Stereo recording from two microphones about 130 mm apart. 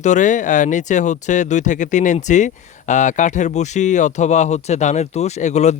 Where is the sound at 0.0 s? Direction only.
70° left (ahead or behind).